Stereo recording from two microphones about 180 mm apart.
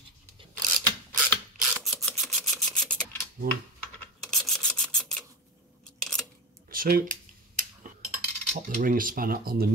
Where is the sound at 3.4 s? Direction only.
55° right (ahead or behind).